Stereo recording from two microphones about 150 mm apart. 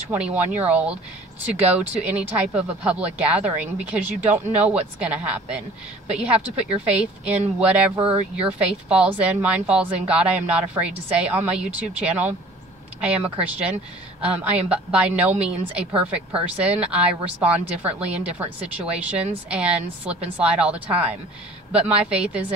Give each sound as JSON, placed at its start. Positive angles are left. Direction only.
{"t": 0.1, "sound": "a woman's voice", "side_deg": -10}
{"t": 8.0, "sound": "speech", "side_deg": -40}
{"t": 8.4, "sound": "a woman's voice", "side_deg": -5}